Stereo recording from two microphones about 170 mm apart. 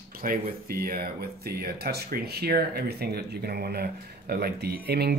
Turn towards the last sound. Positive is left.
turn(degrees=-70)  # may be behind; listen again after turning